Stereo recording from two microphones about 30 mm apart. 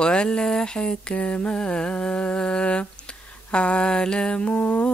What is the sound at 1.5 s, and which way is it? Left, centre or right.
Mantra, left.